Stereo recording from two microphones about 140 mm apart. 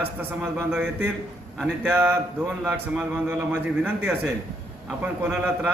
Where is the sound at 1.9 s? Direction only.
15° right (ahead or behind).